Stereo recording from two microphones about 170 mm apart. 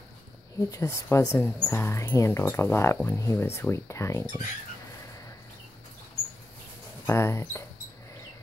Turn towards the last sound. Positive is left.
turn(degrees=15)  # may be behind; listen again after turning